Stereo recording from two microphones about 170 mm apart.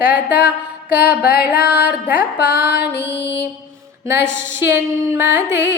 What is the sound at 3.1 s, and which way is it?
Music, 85° left.